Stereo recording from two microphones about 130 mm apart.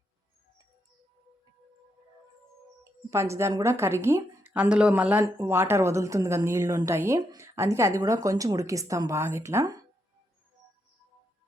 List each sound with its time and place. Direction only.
3.1 s a woman's voice: 20° right (ahead or behind)
4.5 s a woman's voice: 10° right (ahead or behind); by 9.8 s 25° right (ahead or behind)